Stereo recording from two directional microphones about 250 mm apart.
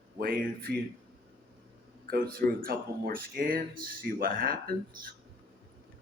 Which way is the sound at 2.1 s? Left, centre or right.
Right.